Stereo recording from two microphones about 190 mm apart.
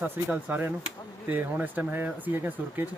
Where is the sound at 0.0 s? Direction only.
10° right (ahead or behind).